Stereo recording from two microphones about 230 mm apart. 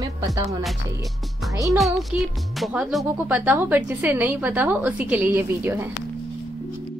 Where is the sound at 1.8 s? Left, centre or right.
Centre.